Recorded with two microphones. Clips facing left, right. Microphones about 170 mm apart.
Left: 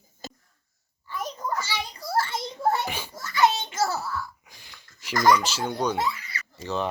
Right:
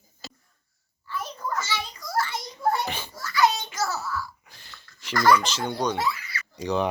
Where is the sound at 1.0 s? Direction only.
20° left (ahead or behind).